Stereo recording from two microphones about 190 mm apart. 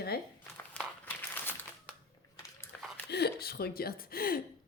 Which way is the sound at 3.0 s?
60° left (ahead or behind).